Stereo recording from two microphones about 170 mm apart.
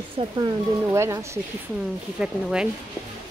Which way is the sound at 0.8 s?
15° right (ahead or behind).